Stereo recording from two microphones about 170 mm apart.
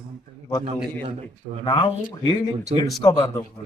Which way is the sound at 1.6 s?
30° left (ahead or behind).